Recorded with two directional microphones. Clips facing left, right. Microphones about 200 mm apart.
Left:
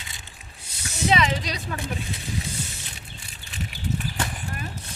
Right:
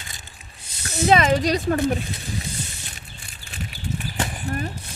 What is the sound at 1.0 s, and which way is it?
Speech, 45° right (ahead or behind).